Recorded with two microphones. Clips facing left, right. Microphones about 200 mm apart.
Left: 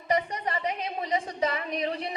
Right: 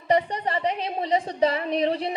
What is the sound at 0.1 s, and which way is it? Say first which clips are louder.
A woman's voice: right 5 dB; 30° right (ahead or behind).